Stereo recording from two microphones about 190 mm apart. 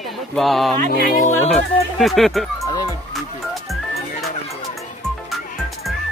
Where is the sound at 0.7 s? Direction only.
50° right (ahead or behind).